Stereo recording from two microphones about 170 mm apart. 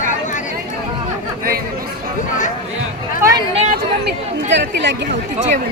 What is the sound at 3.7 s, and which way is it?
Chatter, 80° right.